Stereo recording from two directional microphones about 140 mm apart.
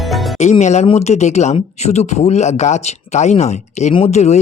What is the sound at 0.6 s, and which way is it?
Speech, 55° left (ahead or behind).